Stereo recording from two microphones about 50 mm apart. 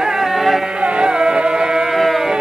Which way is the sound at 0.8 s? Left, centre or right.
Centre.